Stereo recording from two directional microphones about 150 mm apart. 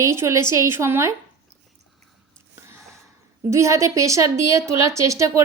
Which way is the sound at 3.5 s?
20° right (ahead or behind).